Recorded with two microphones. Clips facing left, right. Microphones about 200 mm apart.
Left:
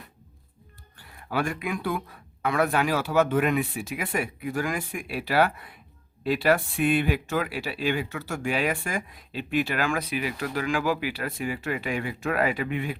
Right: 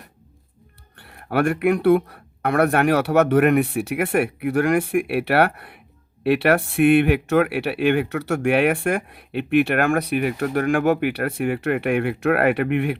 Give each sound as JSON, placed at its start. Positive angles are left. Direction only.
{"t": 0.9, "sound": "speech", "side_deg": -65}